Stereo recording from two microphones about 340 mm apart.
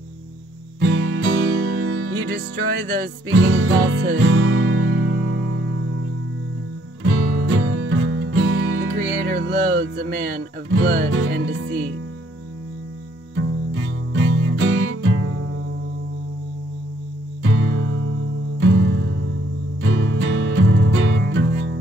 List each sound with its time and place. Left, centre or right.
0.7 s music: right
7.1 s music: right
13.4 s music: right
17.4 s music: right